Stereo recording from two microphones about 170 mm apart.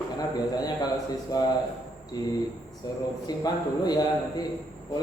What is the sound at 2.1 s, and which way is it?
A man's voice, 20° left (ahead or behind).